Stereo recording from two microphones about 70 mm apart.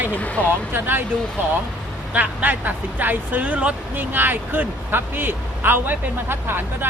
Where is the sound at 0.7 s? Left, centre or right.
Right.